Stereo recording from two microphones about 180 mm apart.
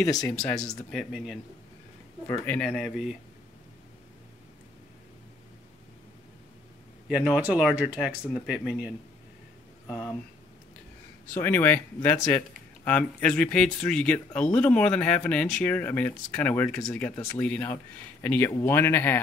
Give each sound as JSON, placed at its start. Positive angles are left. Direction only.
{"t": 0.0, "sound": "speech", "side_deg": 20}
{"t": 0.9, "sound": "speech", "side_deg": 0}
{"t": 2.4, "sound": "speech", "side_deg": 5}
{"t": 7.1, "sound": "speech", "side_deg": -5}
{"t": 9.8, "sound": "speech", "side_deg": 10}
{"t": 11.3, "sound": "speech", "side_deg": 10}